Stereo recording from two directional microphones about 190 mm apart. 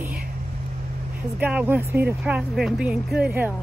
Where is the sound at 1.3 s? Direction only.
10° right (ahead or behind).